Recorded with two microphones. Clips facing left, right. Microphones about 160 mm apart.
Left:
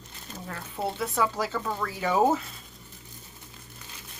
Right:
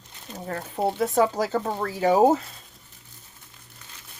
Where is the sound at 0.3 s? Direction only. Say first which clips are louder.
Right 6 dB; 40° right (ahead or behind).